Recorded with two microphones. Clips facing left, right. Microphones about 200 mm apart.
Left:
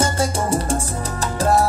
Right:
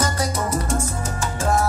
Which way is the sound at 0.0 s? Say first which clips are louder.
Left 3 dB; 30° left (ahead or behind).